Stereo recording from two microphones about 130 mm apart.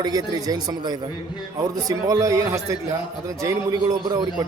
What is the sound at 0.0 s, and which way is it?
A man's voice, 30° right (ahead or behind).